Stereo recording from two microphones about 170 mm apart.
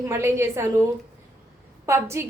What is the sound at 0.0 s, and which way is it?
Speech, 15° right (ahead or behind).